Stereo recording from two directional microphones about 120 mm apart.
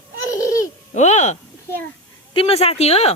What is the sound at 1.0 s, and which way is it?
Speech, 70° left (ahead or behind).